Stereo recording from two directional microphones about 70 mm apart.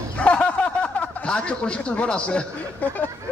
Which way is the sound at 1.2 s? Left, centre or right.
Centre.